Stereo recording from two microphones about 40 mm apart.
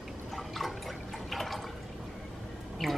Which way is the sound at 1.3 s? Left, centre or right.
Centre.